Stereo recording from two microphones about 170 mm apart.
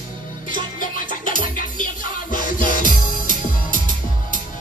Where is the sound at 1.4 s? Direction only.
50° left (ahead or behind).